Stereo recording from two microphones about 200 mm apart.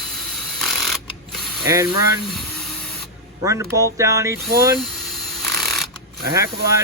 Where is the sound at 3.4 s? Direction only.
15° right (ahead or behind).